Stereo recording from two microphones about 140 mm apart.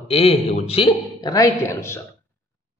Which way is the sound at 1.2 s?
25° left (ahead or behind).